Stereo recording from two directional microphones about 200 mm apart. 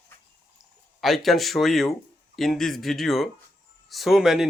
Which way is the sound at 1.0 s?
Centre (ahead or behind).